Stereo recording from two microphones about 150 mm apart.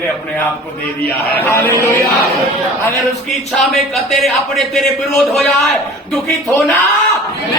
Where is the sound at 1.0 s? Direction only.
15° left (ahead or behind).